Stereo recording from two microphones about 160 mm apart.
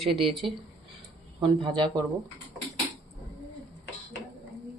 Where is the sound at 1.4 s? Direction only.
25° right (ahead or behind).